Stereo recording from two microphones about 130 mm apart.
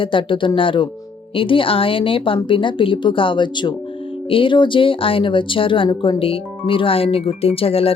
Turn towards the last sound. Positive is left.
turn(degrees=50)  # may be behind; listen again after turning